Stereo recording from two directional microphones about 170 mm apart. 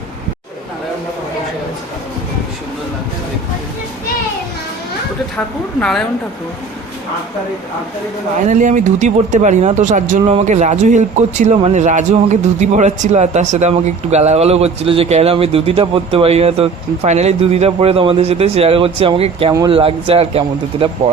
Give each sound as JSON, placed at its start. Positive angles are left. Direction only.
{"t": 8.4, "sound": "speech", "side_deg": -45}